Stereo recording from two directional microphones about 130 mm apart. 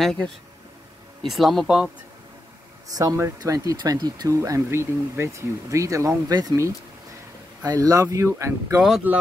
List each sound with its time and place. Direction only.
0.0 s speech: 5° left (ahead or behind)
2.9 s speech: 30° right (ahead or behind)
9.1 s speech: 15° right (ahead or behind)